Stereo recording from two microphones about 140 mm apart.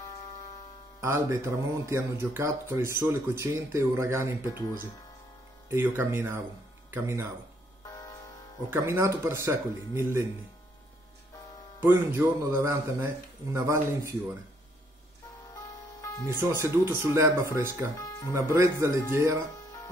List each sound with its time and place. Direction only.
1.0 s speech: 20° right (ahead or behind)
5.7 s speech: 15° right (ahead or behind)
7.8 s music: 25° left (ahead or behind)
8.6 s speech: 15° right (ahead or behind)
11.8 s speech: 20° right (ahead or behind)
15.5 s music: 25° left (ahead or behind)
16.6 s speech: 20° right (ahead or behind)
17.9 s music: 25° left (ahead or behind)
18.3 s speech: 20° right (ahead or behind)